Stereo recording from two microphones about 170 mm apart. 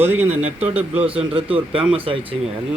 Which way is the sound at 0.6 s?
35° right (ahead or behind).